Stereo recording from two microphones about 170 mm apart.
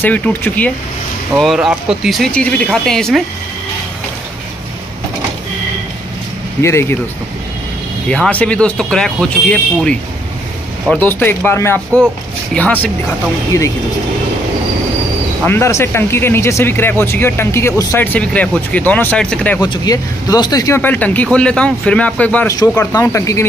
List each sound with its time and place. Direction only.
0.0 s speech: 10° left (ahead or behind)
1.3 s speech: centre (ahead or behind)
6.6 s speech: 15° left (ahead or behind)
8.1 s speech: 5° left (ahead or behind)
13.5 s speech: 20° left (ahead or behind)
15.4 s speech: 15° left (ahead or behind)
19.6 s speech: 25° left (ahead or behind)